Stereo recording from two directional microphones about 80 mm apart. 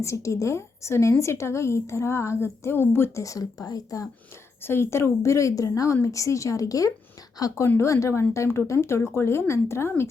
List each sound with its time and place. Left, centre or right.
0.0 s a woman's voice: left
3.2 s speech: left
4.6 s a woman's voice: left